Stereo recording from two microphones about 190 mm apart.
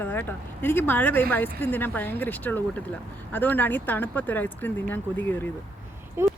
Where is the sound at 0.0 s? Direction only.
10° left (ahead or behind).